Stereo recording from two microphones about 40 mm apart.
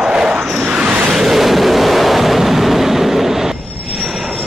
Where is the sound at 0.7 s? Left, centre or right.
Right.